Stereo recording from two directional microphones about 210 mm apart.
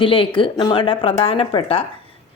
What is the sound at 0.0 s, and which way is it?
Speech, 25° left (ahead or behind).